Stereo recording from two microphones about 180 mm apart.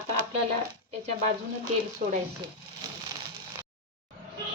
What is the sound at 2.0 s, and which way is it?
Speech, 45° right (ahead or behind).